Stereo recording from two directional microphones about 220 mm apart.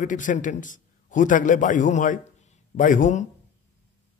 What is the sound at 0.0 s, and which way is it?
A man's voice, 35° left (ahead or behind).